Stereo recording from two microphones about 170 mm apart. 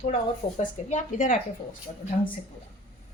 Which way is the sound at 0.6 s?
50° left (ahead or behind).